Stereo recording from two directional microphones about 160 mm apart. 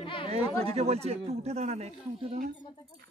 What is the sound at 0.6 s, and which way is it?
Speech, 40° right (ahead or behind).